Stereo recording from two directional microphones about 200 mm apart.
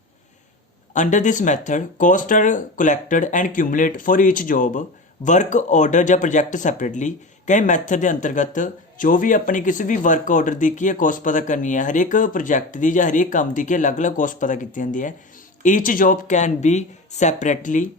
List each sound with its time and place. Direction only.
0.9 s speech: 40° left (ahead or behind)